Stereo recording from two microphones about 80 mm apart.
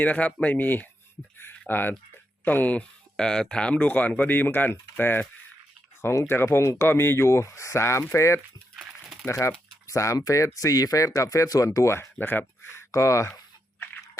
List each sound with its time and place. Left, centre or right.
0.0 s speech: centre; by 8.4 s left
8.7 s a sound: centre
9.2 s speech: left